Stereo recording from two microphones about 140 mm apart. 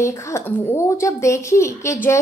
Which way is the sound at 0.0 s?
20° left (ahead or behind).